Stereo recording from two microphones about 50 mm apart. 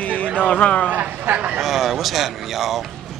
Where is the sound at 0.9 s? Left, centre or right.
Right.